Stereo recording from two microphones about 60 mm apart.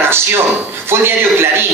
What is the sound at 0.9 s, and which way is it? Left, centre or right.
Speech, right.